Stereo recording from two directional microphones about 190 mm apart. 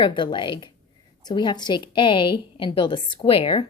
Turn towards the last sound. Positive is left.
turn(degrees=25)  # may be behind; listen again after turning